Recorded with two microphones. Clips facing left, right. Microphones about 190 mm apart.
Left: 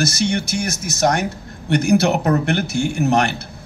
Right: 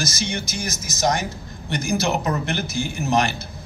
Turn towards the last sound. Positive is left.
turn(degrees=65)  # may be behind; listen again after turning